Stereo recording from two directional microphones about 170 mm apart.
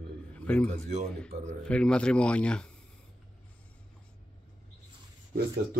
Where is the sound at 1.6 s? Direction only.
5° left (ahead or behind).